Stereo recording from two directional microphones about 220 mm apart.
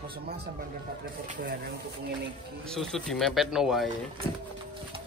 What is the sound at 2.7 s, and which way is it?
Speech, centre (ahead or behind).